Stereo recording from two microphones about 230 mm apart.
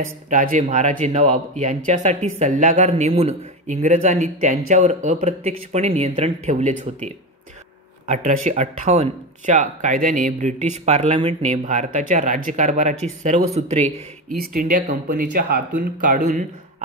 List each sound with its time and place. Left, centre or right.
0.3 s speech: right
8.1 s speech: right
14.3 s speech: right